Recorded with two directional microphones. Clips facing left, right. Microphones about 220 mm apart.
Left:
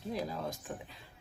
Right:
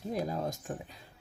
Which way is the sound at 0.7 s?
45° right (ahead or behind).